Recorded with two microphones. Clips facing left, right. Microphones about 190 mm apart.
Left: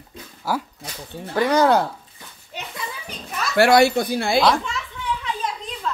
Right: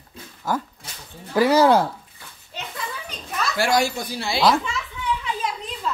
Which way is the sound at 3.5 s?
65° left (ahead or behind).